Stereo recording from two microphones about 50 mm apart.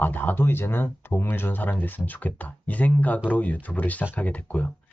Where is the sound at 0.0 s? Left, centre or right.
Left.